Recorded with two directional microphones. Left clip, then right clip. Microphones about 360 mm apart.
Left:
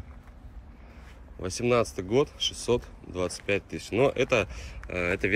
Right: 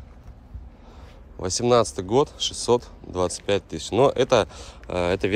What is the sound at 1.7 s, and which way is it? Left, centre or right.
Speech, centre.